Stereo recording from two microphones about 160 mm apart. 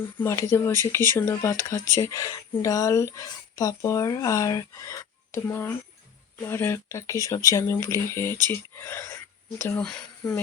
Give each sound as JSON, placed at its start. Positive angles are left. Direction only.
{"t": 0.0, "sound": "speech", "side_deg": 15}